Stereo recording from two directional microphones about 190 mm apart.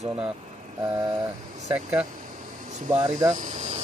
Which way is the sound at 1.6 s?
5° right (ahead or behind).